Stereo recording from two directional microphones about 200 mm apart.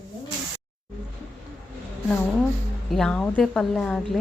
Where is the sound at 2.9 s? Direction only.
5° left (ahead or behind).